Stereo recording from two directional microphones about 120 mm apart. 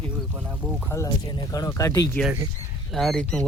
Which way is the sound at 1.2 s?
35° left (ahead or behind).